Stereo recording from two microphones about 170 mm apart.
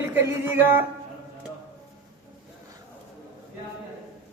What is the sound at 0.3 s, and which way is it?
Speech, 15° right (ahead or behind).